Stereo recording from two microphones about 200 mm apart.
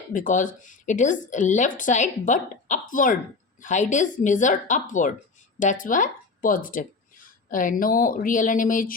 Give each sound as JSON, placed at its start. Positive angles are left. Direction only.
{"t": 0.1, "sound": "a woman's voice", "side_deg": 40}